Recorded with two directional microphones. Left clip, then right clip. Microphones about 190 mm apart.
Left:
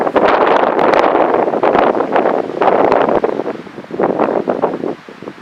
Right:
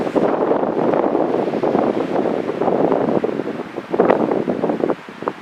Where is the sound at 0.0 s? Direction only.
30° left (ahead or behind).